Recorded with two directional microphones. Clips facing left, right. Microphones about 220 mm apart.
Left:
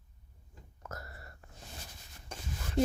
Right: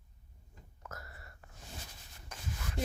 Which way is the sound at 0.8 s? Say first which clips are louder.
Left 4 dB; 40° left (ahead or behind).